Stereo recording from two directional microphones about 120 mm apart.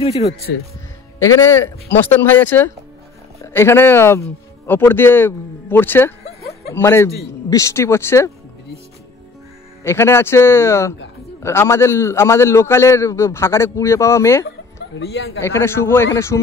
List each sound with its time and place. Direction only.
1.2 s a man's voice: 20° left (ahead or behind)
9.8 s a man's voice: 20° left (ahead or behind)
15.4 s a man's voice: 20° left (ahead or behind)